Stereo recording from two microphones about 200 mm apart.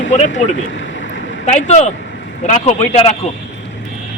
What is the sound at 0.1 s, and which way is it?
Speech, 35° left (ahead or behind).